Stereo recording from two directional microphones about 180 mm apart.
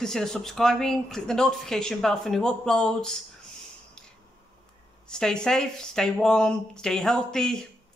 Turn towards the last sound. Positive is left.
turn(degrees=5)  # may be behind; listen again after turning